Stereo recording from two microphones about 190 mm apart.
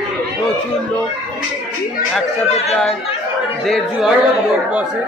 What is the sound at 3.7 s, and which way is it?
Speech, centre (ahead or behind).